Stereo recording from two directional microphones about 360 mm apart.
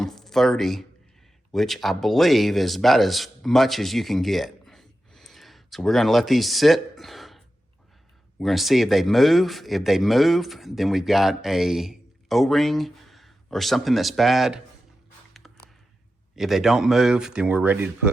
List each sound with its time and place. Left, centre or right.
0.0 s a sound: centre
1.5 s speech: centre
16.3 s speech: centre